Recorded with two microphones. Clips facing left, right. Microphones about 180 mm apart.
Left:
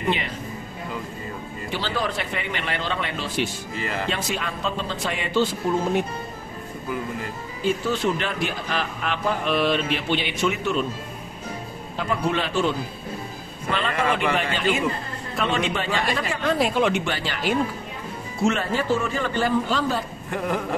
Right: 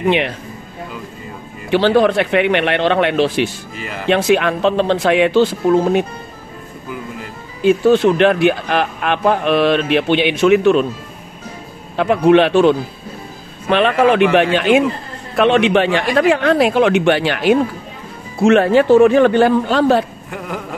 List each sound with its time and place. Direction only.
1.7 s speech: 70° right (ahead or behind)
7.6 s speech: 65° right (ahead or behind)
12.0 s speech: 70° right (ahead or behind)
20.2 s a sound: centre (ahead or behind)